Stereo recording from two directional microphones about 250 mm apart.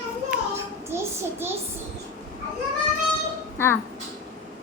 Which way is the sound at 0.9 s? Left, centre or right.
Centre.